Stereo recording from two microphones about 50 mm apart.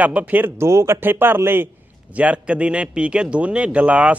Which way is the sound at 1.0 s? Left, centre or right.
Right.